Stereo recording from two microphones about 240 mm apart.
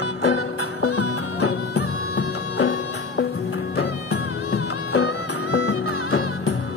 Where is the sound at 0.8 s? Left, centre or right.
Left.